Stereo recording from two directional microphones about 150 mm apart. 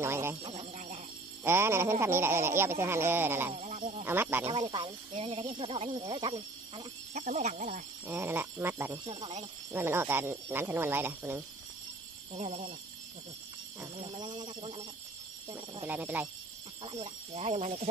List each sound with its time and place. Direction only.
0.0 s a man's voice: 15° right (ahead or behind)
0.4 s speech: 40° right (ahead or behind)
1.4 s a man's voice: 15° right (ahead or behind)
3.5 s speech: 55° right (ahead or behind)
4.0 s a man's voice: 15° right (ahead or behind)
4.5 s speech: 35° right (ahead or behind)
7.2 s speech: 50° right (ahead or behind)
8.1 s a man's voice: 15° right (ahead or behind)
9.0 s speech: 35° right (ahead or behind)
9.7 s a man's voice: 15° right (ahead or behind)
12.4 s speech: 45° right (ahead or behind)
13.9 s speech: 35° right (ahead or behind)
15.8 s a man's voice: 10° right (ahead or behind)
16.8 s speech: 45° right (ahead or behind)